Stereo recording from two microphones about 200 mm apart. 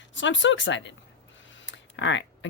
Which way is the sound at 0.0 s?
65° left (ahead or behind).